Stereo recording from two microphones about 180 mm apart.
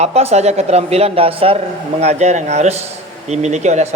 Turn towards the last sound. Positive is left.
turn(degrees=-40)  # may be behind; listen again after turning